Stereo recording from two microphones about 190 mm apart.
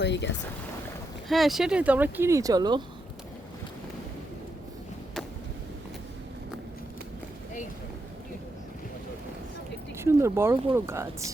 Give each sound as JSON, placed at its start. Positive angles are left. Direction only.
{"t": 0.0, "sound": "speech", "side_deg": 65}
{"t": 1.3, "sound": "speech", "side_deg": 0}
{"t": 10.0, "sound": "speech", "side_deg": -15}